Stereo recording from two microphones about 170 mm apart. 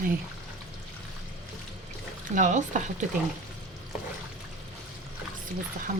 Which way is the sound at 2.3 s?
45° right (ahead or behind).